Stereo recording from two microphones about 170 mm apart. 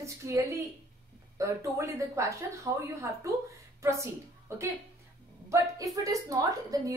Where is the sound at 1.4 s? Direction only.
15° right (ahead or behind).